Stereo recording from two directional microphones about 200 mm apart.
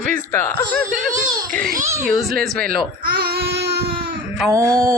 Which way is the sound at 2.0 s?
Centre (ahead or behind).